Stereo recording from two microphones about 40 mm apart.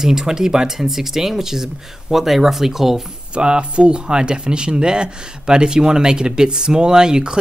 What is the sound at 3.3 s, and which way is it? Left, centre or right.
Speech, right.